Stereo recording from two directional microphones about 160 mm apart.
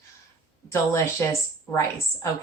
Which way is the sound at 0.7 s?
20° left (ahead or behind).